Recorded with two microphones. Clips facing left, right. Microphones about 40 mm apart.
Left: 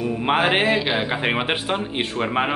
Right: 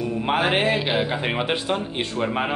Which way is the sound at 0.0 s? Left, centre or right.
Left.